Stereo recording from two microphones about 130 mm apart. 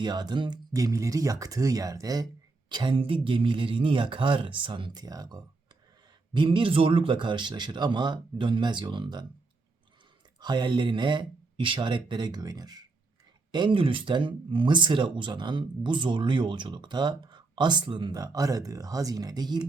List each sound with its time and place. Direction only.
0.0 s speech: 35° right (ahead or behind)
6.3 s speech: 40° right (ahead or behind)
10.4 s speech: 35° right (ahead or behind)